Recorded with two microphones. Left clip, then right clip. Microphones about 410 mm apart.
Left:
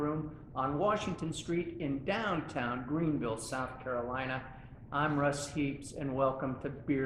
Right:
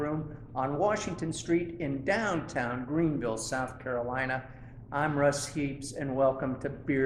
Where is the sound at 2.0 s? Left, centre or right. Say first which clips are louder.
Right 5 dB; right.